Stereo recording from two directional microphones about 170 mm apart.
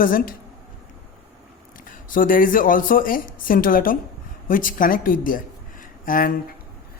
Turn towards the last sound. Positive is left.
turn(degrees=55)  # may be behind; listen again after turning